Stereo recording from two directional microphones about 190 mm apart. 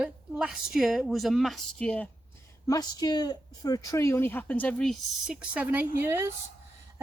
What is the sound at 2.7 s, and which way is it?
Speech, 20° left (ahead or behind).